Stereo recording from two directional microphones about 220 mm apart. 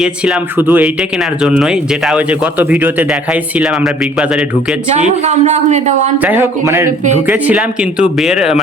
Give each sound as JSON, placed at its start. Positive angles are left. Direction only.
{"t": 0.0, "sound": "speech", "side_deg": -5}
{"t": 4.9, "sound": "speech", "side_deg": -30}
{"t": 6.1, "sound": "a man's voice", "side_deg": -10}